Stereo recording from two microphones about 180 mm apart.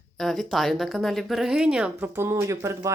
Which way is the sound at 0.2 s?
Centre (ahead or behind).